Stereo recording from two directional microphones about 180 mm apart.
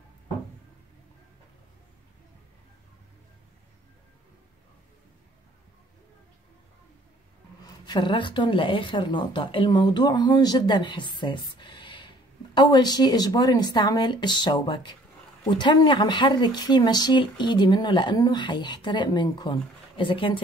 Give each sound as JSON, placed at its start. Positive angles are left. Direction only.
{"t": 7.6, "sound": "speech", "side_deg": 25}